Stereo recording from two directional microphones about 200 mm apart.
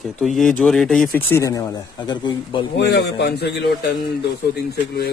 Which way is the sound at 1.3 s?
15° left (ahead or behind).